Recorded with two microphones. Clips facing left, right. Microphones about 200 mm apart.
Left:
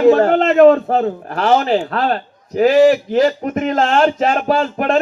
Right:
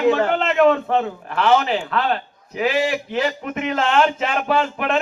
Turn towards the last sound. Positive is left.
turn(degrees=40)  # may be behind; listen again after turning